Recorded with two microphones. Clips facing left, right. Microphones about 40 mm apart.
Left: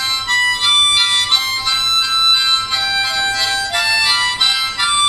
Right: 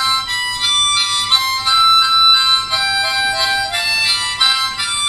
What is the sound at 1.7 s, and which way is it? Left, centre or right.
Harmonica, centre.